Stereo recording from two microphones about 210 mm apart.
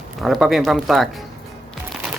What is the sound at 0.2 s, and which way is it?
Speech, centre (ahead or behind).